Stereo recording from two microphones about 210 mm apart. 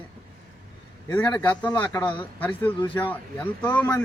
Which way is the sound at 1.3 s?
10° left (ahead or behind).